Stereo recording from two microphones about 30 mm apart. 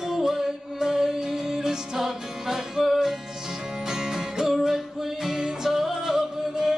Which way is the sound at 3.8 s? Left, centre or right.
Centre.